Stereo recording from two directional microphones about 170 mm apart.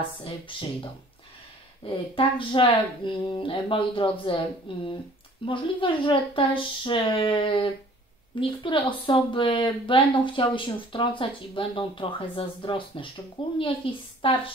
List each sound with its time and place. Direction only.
0.2 s speech: 30° left (ahead or behind)